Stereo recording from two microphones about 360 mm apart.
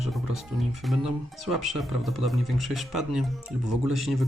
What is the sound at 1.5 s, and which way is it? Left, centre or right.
Speech, centre.